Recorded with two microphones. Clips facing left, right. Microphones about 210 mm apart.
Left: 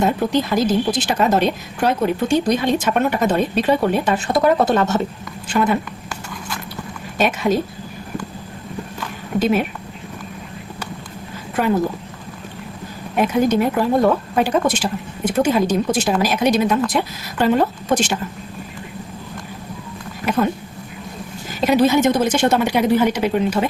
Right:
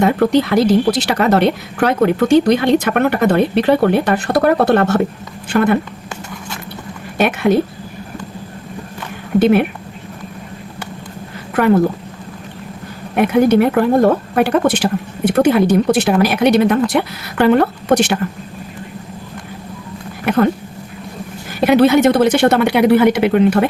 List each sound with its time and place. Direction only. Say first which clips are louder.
0.0 s a woman's voice: right 5 dB; 65° right (ahead or behind)
7.2 s a woman's voice: right 4 dB; 60° right (ahead or behind)
9.4 s a woman's voice: right 6 dB; 60° right (ahead or behind)
13.1 s a woman's voice: right 5 dB; 60° right (ahead or behind)
20.2 s a woman's voice: right 5 dB; 60° right (ahead or behind)
21.7 s a woman's voice: right 4 dB; 65° right (ahead or behind)